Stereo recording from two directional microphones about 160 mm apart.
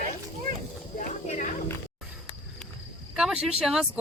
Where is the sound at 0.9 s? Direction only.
55° left (ahead or behind).